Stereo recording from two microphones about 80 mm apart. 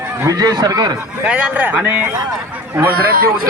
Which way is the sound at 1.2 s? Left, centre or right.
Centre.